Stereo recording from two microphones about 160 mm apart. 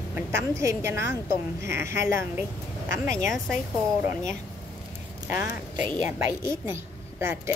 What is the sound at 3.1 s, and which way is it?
Speech, centre (ahead or behind).